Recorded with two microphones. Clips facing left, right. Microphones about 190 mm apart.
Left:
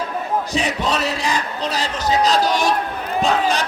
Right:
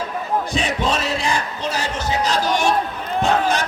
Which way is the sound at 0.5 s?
35° left (ahead or behind).